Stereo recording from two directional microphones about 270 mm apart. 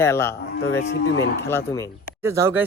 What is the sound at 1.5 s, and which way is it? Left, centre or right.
Speech, centre.